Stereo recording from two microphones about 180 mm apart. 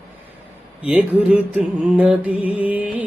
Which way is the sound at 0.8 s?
5° right (ahead or behind).